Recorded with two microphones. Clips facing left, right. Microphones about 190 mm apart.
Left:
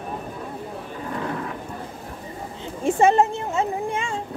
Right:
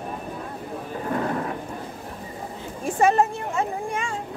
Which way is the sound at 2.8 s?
25° left (ahead or behind).